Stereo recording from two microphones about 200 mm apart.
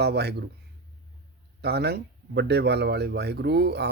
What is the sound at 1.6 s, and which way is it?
Speech, 55° right (ahead or behind).